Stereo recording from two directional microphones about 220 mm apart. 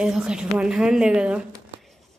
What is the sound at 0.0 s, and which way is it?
A woman's voice, 5° right (ahead or behind).